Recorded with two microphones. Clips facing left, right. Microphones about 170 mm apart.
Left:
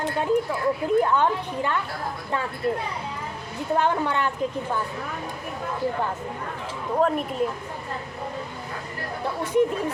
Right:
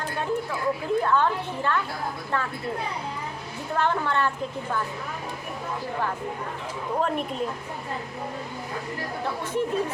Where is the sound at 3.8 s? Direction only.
15° left (ahead or behind).